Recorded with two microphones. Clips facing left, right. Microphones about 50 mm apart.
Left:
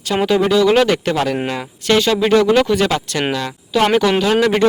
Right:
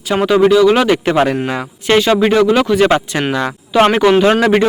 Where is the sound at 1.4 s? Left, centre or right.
Centre.